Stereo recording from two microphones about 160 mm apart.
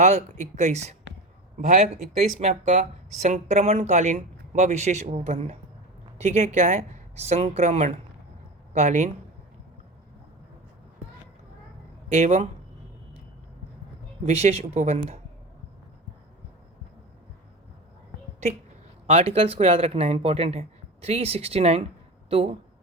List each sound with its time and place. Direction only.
0.0 s speech: 45° right (ahead or behind)
1.5 s speech: 55° right (ahead or behind)
2.4 s speech: 50° right (ahead or behind)
12.1 s speech: 45° right (ahead or behind)
14.3 s speech: 40° right (ahead or behind)
19.0 s speech: 40° right (ahead or behind)